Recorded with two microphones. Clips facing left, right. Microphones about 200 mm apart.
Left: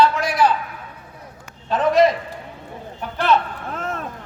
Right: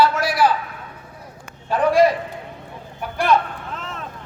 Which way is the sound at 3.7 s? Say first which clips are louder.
Left 8 dB; 50° left (ahead or behind).